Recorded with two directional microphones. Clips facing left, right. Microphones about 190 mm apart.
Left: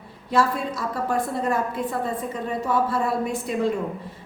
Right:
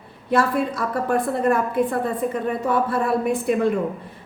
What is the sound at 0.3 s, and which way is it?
A woman's voice, 55° right (ahead or behind).